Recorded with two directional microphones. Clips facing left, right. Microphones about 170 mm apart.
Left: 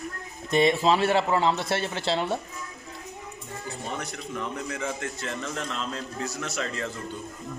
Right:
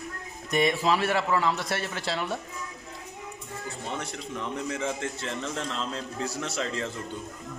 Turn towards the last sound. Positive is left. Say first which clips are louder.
# right 1 dB
turn(degrees=-25)  # may be behind; listen again after turning